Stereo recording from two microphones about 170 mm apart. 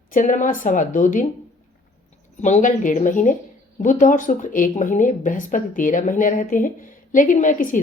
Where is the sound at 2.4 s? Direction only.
45° left (ahead or behind).